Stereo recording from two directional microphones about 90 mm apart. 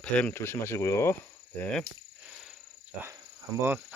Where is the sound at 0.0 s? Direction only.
15° left (ahead or behind).